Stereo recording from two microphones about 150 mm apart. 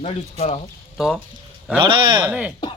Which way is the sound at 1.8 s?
30° right (ahead or behind).